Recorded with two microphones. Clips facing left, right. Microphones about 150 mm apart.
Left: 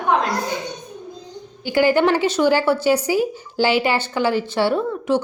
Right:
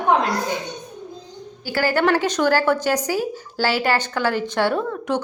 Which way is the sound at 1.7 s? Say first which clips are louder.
Left 3 dB; 15° left (ahead or behind).